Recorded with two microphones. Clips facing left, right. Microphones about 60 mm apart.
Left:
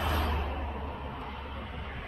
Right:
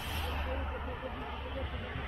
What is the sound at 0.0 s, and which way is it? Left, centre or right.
Music, left.